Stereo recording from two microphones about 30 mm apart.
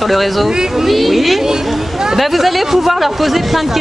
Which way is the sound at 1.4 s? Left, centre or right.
Centre.